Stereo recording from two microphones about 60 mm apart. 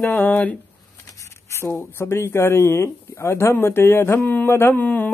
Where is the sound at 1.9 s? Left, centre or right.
Left.